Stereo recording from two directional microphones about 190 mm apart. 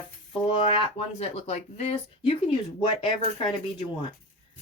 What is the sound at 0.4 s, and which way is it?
Speech, 30° left (ahead or behind).